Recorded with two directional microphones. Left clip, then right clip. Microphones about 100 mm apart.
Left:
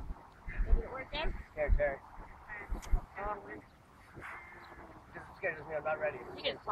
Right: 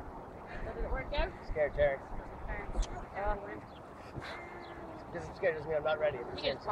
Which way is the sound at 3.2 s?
55° right (ahead or behind).